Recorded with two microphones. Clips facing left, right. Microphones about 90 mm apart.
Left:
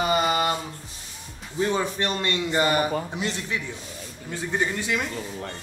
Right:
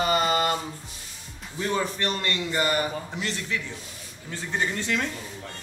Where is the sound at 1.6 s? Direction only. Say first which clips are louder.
Left 3 dB; 20° left (ahead or behind).